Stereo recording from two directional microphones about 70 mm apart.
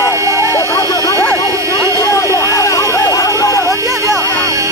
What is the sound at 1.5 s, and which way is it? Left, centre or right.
Vehicle, right.